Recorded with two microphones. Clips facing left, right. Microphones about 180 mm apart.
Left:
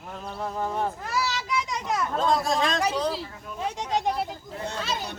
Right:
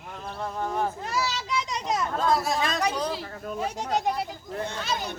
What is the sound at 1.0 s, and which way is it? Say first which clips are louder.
A child's voice: even; 20° right (ahead or behind).